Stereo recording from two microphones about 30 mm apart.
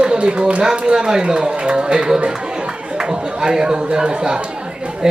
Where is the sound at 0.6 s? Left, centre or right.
Right.